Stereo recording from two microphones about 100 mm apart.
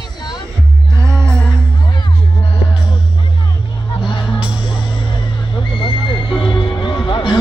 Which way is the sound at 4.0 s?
50° left (ahead or behind).